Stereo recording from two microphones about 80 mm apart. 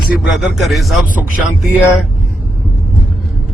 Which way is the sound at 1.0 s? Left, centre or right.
Centre.